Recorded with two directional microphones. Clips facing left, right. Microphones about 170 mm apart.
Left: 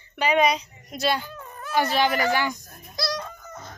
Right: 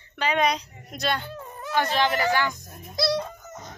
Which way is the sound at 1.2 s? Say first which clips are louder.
Right 2 dB; 25° right (ahead or behind).